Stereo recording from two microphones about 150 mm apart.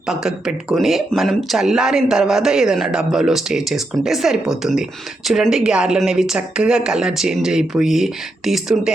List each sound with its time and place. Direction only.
0.1 s speech: 5° right (ahead or behind)